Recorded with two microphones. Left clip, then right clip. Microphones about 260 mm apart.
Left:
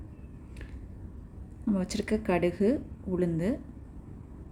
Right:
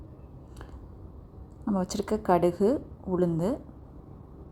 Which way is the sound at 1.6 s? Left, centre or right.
Centre.